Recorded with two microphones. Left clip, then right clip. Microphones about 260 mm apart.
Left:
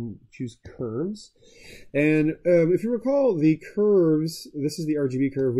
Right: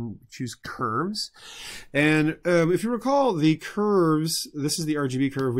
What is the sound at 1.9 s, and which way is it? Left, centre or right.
A man's voice, right.